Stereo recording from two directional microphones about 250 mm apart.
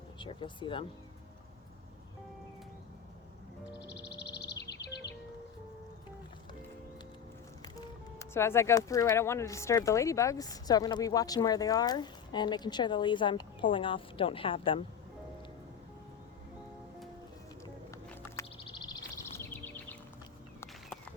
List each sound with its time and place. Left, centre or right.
0.2 s speech: centre
3.7 s music: left
7.6 s speech: centre
18.5 s bird: centre